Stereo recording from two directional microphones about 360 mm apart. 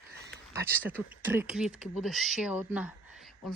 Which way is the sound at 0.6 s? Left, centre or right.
Centre.